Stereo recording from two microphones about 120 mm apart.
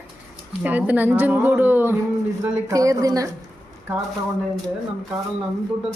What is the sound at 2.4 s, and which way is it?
Speech, 30° right (ahead or behind).